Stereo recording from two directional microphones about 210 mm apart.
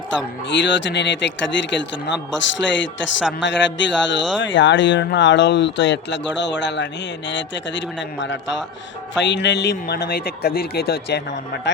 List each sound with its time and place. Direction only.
0.5 s a man's voice: 60° left (ahead or behind)